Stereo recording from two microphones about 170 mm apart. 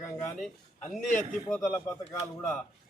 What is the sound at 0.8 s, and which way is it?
Speech, 45° left (ahead or behind).